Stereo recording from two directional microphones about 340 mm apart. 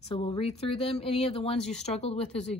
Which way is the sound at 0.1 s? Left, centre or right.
Centre.